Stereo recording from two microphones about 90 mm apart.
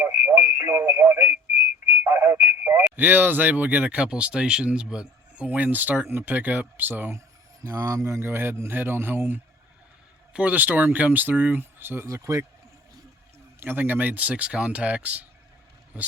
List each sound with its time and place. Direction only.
0.0 s speech: 20° right (ahead or behind)
0.9 s speech: 30° right (ahead or behind)
1.2 s a sound: 15° right (ahead or behind)
2.0 s a sound: 25° right (ahead or behind)
2.4 s speech: 20° right (ahead or behind)
7.6 s speech: 35° right (ahead or behind)
12.0 s speech: 35° right (ahead or behind)
13.6 s speech: 25° right (ahead or behind)